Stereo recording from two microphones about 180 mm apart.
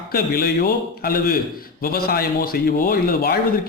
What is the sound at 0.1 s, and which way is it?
A man's voice, 60° left (ahead or behind).